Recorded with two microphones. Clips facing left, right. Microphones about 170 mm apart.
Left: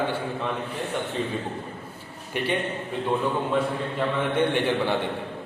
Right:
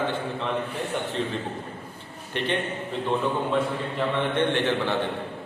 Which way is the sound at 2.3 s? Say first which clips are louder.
Left 1 dB; 10° left (ahead or behind).